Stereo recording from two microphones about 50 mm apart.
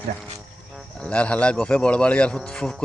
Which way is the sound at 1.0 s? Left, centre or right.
Left.